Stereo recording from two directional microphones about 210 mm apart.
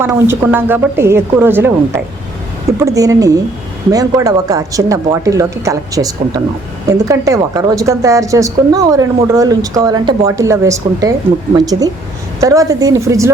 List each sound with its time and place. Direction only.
0.0 s a woman's voice: 10° right (ahead or behind)